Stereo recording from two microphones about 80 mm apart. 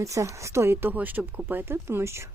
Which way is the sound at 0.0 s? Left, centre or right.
Right.